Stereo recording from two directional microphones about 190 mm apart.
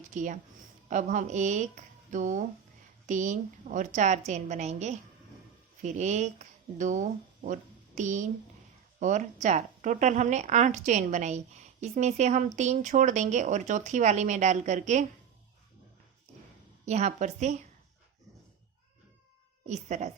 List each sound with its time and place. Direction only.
0.1 s a woman's voice: 40° right (ahead or behind)
16.8 s speech: 35° right (ahead or behind)
19.6 s speech: 40° right (ahead or behind)